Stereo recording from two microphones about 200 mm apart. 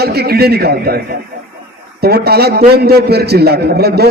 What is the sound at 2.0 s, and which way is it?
A man's voice, 50° right (ahead or behind).